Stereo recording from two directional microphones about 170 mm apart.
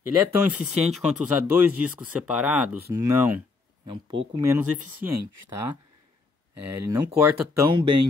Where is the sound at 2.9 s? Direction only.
15° right (ahead or behind).